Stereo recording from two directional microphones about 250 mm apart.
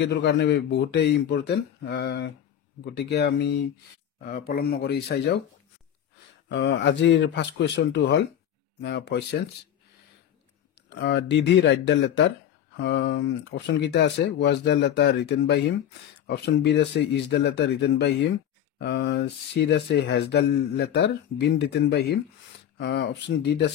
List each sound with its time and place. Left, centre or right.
0.0 s speech: left
6.5 s speech: left
10.9 s speech: left